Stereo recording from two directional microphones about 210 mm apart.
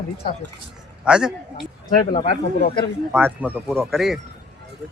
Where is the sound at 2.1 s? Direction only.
45° left (ahead or behind).